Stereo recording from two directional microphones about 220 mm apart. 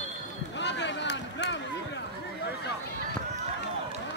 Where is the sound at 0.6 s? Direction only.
55° left (ahead or behind).